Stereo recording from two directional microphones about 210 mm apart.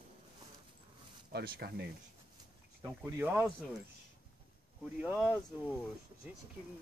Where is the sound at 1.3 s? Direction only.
50° right (ahead or behind).